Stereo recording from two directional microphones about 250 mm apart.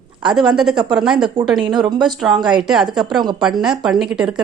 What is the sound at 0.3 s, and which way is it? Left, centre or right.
Speech, centre.